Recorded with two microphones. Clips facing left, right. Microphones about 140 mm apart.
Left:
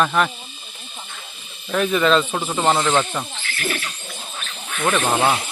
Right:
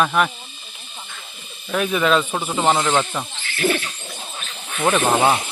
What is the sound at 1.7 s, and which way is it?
Speech, 5° right (ahead or behind).